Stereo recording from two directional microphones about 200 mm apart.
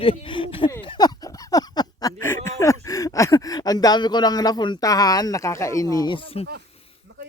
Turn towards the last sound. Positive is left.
turn(degrees=30)  # may be behind; listen again after turning